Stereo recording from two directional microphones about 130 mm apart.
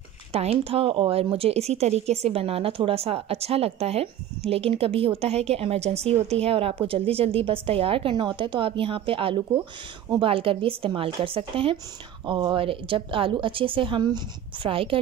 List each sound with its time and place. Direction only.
0.3 s a woman's voice: 50° right (ahead or behind)